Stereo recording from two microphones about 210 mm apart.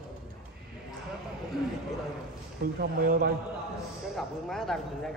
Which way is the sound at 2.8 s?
45° right (ahead or behind).